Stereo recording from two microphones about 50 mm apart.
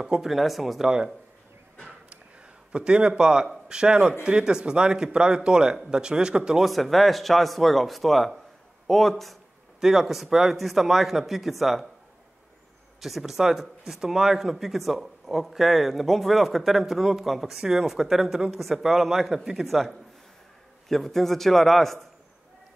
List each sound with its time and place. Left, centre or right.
0.0 s a man's voice: centre
0.8 s speech: centre
2.0 s a sound: right
4.2 s speech: centre
6.6 s a man's voice: centre
13.0 s a man's voice: centre